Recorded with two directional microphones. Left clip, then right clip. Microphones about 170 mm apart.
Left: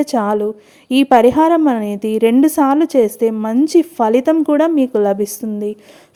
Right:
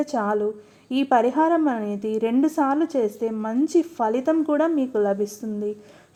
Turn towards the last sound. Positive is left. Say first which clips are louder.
# left 6 dB
turn(degrees=30)  # may be behind; listen again after turning